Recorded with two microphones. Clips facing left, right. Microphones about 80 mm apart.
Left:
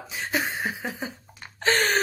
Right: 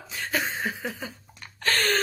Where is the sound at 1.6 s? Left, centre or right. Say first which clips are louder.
Left 2 dB; centre.